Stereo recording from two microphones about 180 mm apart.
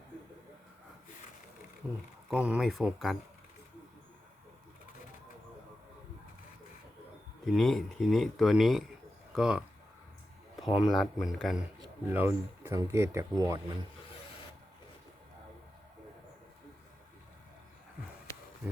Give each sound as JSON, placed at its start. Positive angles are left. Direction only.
{"t": 2.3, "sound": "speech", "side_deg": -5}
{"t": 7.4, "sound": "speech", "side_deg": 0}
{"t": 10.8, "sound": "speech", "side_deg": 0}
{"t": 12.0, "sound": "speech", "side_deg": -10}
{"t": 18.3, "sound": "a sound", "side_deg": 15}